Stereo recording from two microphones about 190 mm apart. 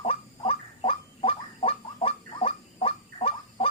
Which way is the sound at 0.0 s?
30° left (ahead or behind).